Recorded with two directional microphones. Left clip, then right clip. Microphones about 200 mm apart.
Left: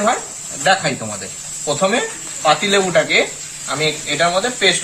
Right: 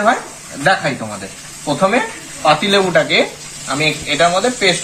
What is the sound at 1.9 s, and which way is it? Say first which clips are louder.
Speech: right 2 dB; 20° left (ahead or behind).